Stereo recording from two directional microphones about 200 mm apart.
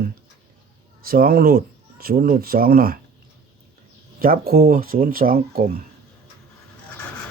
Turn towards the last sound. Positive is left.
turn(degrees=-50)  # may be behind; listen again after turning